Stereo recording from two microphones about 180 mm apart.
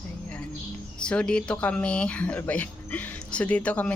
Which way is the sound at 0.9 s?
5° left (ahead or behind).